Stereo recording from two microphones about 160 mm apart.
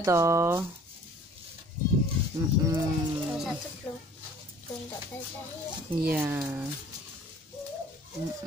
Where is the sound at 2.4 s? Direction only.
20° right (ahead or behind).